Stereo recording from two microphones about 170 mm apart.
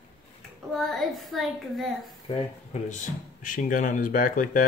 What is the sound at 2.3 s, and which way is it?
Speech, 45° left (ahead or behind).